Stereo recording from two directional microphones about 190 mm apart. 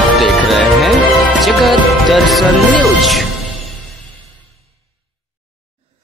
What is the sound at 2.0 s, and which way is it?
Speech, centre (ahead or behind).